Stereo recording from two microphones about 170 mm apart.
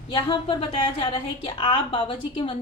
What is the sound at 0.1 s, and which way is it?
A woman's voice, 30° left (ahead or behind).